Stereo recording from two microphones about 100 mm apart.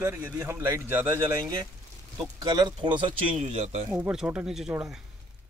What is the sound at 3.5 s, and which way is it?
Speech, 90° right.